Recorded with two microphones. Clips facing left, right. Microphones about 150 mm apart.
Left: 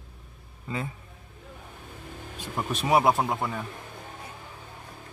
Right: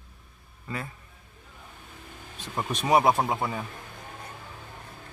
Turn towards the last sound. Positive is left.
turn(degrees=-5)  # may be behind; listen again after turning